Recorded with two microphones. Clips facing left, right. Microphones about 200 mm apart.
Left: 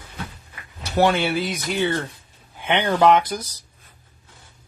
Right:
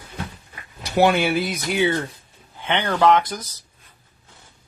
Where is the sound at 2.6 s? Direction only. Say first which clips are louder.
Left 2 dB; 15° left (ahead or behind).